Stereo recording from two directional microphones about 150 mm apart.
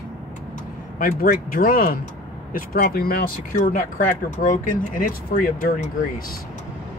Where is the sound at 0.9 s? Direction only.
70° left (ahead or behind).